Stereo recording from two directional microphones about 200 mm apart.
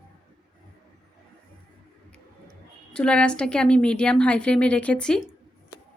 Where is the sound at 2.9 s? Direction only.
5° left (ahead or behind).